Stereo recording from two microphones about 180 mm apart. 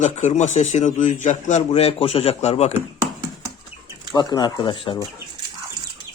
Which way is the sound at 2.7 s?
15° right (ahead or behind).